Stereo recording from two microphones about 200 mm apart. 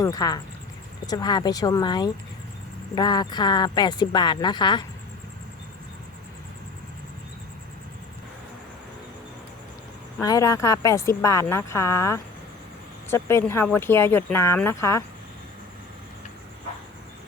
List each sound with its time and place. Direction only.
0.0 s speech: 20° left (ahead or behind)
10.2 s speech: 15° left (ahead or behind)